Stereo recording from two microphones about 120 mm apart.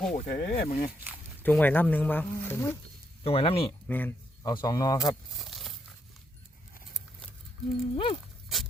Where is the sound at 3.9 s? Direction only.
15° left (ahead or behind).